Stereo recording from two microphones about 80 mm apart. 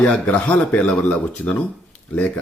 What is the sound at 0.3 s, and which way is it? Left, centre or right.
Speech, centre.